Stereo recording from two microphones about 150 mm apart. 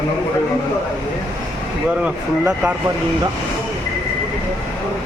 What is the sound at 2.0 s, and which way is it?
Speech, 10° right (ahead or behind).